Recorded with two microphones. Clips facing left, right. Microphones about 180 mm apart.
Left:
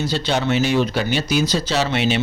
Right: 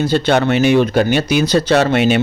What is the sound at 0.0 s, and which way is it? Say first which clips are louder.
A man's voice: right 7 dB; 55° right (ahead or behind).